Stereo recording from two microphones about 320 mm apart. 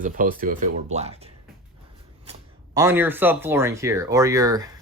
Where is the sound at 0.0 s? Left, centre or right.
Right.